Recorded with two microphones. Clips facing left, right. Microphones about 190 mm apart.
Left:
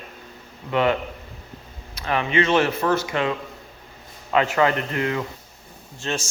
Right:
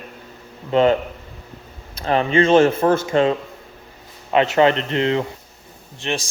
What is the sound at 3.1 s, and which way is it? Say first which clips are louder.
Speech: right 7 dB; 30° right (ahead or behind).